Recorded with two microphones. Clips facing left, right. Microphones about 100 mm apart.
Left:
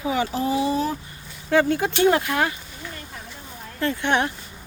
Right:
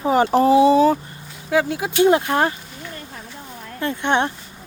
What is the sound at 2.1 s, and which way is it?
Speech, 25° right (ahead or behind).